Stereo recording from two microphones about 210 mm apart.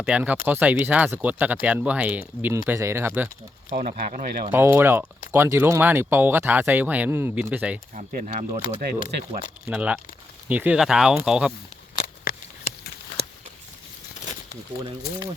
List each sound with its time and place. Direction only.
0.0 s speech: 5° right (ahead or behind)
3.7 s speech: 40° right (ahead or behind)
4.5 s speech: 10° right (ahead or behind)
7.9 s speech: 35° right (ahead or behind)
9.6 s speech: 5° right (ahead or behind)
11.9 s a sound: 45° left (ahead or behind)